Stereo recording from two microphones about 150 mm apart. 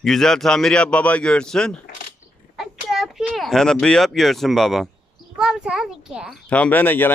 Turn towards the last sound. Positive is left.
turn(degrees=15)  # may be behind; listen again after turning